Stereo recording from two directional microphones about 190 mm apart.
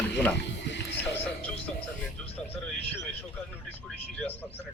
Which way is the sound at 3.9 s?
10° left (ahead or behind).